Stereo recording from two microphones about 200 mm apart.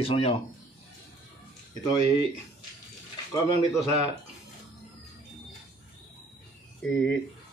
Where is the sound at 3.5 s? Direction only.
35° right (ahead or behind).